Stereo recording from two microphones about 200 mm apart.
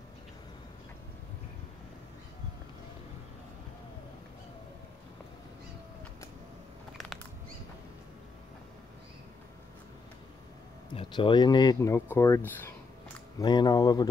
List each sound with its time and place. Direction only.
11.0 s speech: 25° left (ahead or behind)
13.4 s speech: 20° left (ahead or behind)